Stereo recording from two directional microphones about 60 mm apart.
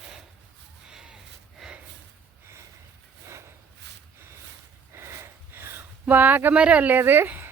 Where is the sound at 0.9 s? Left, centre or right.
Centre.